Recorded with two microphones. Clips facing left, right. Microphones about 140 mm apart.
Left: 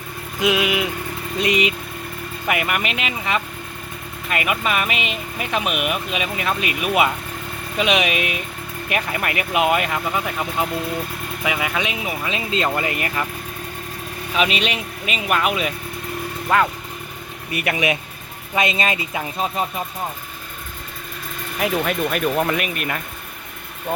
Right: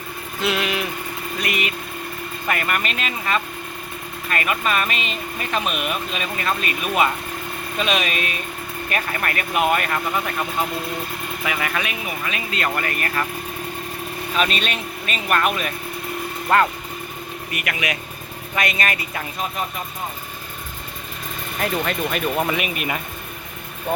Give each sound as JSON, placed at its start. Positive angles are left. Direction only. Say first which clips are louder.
{"t": 0.3, "sound": "speech", "louder": "left 4 dB", "side_deg": 15}
{"t": 2.5, "sound": "speech", "louder": "left 2 dB", "side_deg": 10}
{"t": 14.3, "sound": "speech", "louder": "left 2 dB", "side_deg": 10}
{"t": 18.5, "sound": "speech", "louder": "left 3 dB", "side_deg": 20}
{"t": 21.6, "sound": "speech", "louder": "left 2 dB", "side_deg": 5}